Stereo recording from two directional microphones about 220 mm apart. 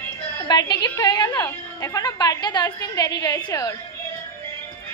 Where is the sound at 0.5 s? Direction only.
20° left (ahead or behind).